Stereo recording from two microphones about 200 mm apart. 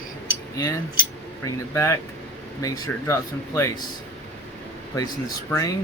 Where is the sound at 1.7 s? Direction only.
15° left (ahead or behind).